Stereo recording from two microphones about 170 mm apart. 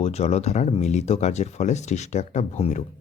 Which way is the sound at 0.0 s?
40° left (ahead or behind).